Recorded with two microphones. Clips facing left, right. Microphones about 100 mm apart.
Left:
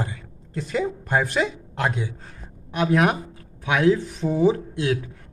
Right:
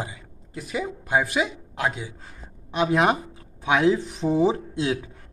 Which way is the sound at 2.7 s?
20° right (ahead or behind).